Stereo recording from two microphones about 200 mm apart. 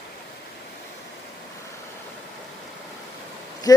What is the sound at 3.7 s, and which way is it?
Speech, 20° left (ahead or behind).